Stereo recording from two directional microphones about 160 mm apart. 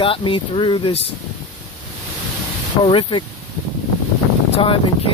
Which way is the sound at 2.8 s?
30° left (ahead or behind).